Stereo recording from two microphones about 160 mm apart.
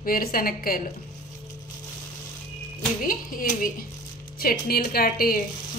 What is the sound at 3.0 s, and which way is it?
Speech, 60° left (ahead or behind).